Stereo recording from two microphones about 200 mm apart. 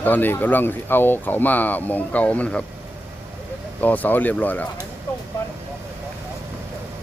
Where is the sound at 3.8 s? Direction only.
10° left (ahead or behind).